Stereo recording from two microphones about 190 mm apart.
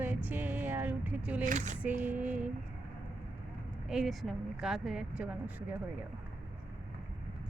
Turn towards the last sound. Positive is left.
turn(degrees=-5)  # may be behind; listen again after turning